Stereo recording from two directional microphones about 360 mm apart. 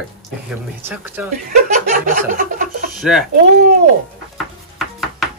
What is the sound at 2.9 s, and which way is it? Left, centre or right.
Speech, centre.